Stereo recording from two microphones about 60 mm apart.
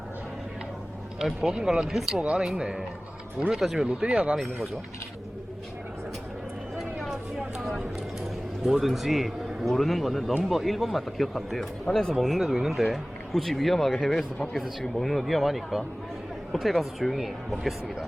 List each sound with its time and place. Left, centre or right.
1.2 s speech: centre
3.8 s speech: centre
6.7 s a sound: centre
8.6 s speech: centre